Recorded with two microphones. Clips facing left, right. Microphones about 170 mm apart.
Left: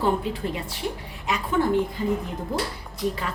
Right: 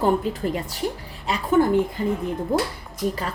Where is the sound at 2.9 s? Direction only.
40° right (ahead or behind).